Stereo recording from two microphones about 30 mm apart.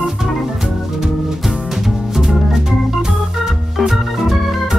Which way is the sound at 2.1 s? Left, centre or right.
Centre.